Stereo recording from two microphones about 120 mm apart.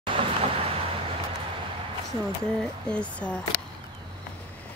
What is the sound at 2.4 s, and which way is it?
Speech, 10° left (ahead or behind).